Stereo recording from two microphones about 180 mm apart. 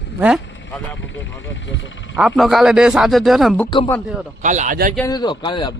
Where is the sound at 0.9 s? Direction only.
90° left.